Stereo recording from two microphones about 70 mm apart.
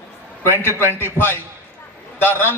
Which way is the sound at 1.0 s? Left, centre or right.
Left.